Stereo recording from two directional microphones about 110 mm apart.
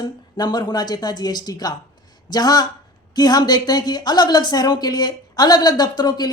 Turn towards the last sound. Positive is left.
turn(degrees=40)  # may be behind; listen again after turning